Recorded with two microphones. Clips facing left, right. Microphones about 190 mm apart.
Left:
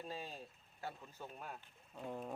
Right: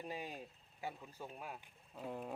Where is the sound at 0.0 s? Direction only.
15° right (ahead or behind).